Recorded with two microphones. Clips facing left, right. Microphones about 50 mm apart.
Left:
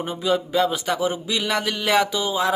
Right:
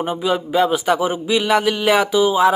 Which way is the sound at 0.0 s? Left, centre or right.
Right.